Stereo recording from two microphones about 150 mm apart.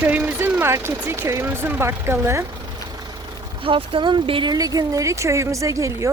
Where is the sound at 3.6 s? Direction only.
35° right (ahead or behind).